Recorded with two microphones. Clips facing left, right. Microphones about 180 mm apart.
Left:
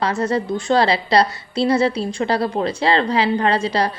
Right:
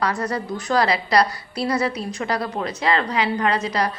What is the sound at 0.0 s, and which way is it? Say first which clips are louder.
A woman's voice: left 4 dB; 25° left (ahead or behind).